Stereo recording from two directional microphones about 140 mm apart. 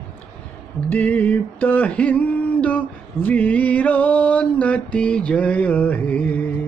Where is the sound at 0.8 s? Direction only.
10° left (ahead or behind).